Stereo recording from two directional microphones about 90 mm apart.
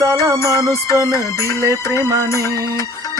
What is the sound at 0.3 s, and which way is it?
Music, 35° left (ahead or behind).